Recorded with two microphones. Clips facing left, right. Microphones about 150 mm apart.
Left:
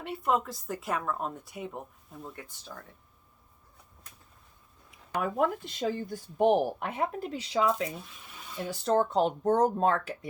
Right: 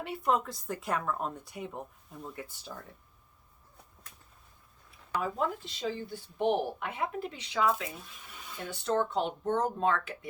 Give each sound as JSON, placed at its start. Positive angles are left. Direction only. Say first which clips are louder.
{"t": 0.0, "sound": "speech", "louder": "left 1 dB", "side_deg": 0}
{"t": 5.2, "sound": "speech", "louder": "left 5 dB", "side_deg": 55}